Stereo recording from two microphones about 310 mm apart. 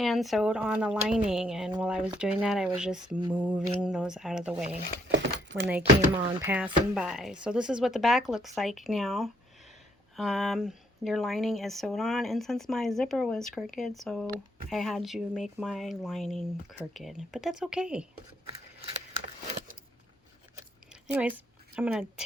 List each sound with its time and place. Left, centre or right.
0.0 s a woman's voice: centre
5.1 s keys jangling: right
5.8 s speech: centre
6.4 s a woman's voice: centre
20.9 s a sound: centre